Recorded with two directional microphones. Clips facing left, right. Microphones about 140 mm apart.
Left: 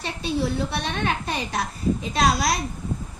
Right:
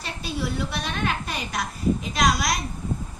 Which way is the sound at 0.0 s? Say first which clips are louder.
Left 4 dB; 25° left (ahead or behind).